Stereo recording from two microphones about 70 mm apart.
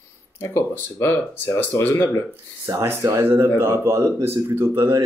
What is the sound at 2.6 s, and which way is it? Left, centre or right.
Speech, right.